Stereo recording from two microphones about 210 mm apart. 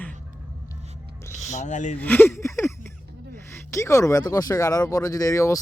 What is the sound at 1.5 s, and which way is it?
Speech, 35° left (ahead or behind).